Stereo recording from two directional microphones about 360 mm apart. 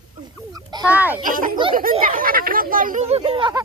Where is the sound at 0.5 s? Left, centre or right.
Centre.